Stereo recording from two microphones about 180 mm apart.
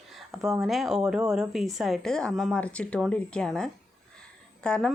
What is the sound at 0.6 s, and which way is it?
Speech, centre (ahead or behind).